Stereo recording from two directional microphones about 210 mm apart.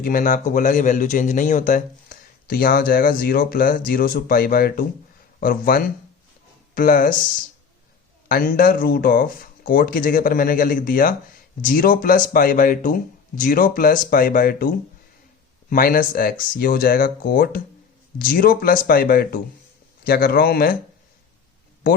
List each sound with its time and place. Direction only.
0.0 s a man's voice: 40° left (ahead or behind)
8.3 s speech: 40° left (ahead or behind)
15.7 s speech: 40° left (ahead or behind)